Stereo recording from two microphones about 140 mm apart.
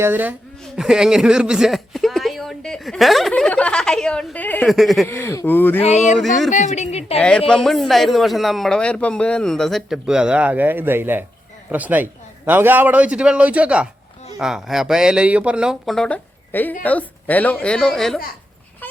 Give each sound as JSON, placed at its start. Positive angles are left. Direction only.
{"t": 0.0, "sound": "a man's voice", "side_deg": -15}
{"t": 4.7, "sound": "a man's voice", "side_deg": 0}
{"t": 5.0, "sound": "a woman's voice", "side_deg": 15}
{"t": 5.8, "sound": "a woman's voice", "side_deg": 55}
{"t": 6.1, "sound": "a man's voice", "side_deg": 0}
{"t": 6.5, "sound": "a woman's voice", "side_deg": 55}
{"t": 7.2, "sound": "a man's voice", "side_deg": 5}